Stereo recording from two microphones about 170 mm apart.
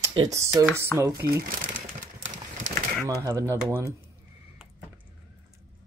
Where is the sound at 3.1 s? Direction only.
20° right (ahead or behind).